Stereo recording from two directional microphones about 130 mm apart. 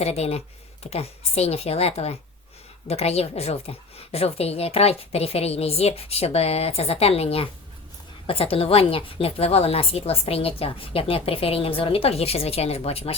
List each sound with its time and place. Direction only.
0.0 s a woman's voice: 55° left (ahead or behind)